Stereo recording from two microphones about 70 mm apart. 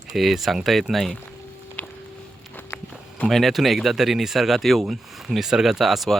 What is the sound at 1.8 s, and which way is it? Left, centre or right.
Music, left.